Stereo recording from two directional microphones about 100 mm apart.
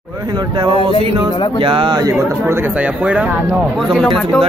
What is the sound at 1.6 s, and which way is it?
Speech, 60° right (ahead or behind).